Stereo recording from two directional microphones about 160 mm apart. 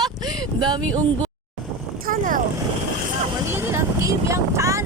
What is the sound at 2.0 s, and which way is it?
Boat, 55° right (ahead or behind).